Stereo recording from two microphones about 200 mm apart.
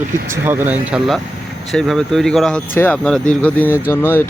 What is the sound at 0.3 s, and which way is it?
Speech, 10° right (ahead or behind).